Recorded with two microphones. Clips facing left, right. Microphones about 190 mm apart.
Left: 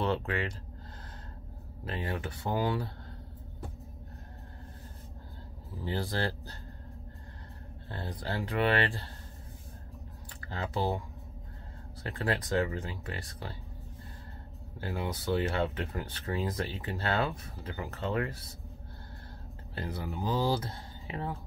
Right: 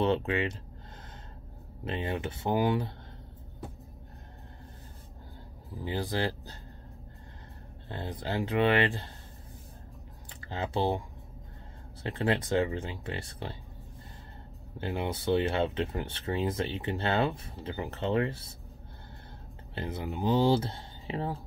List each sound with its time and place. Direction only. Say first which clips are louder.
0.0 s speech: right 4 dB; 20° right (ahead or behind)
1.9 s speech: right 3 dB; 20° right (ahead or behind)
5.8 s speech: right 2 dB; 15° right (ahead or behind)
7.9 s speech: right 3 dB; 20° right (ahead or behind)
10.4 s speech: right 3 dB; 20° right (ahead or behind)
12.0 s speech: right 4 dB; 25° right (ahead or behind)
14.8 s speech: right 3 dB; 25° right (ahead or behind)
19.7 s speech: right 2 dB; 25° right (ahead or behind)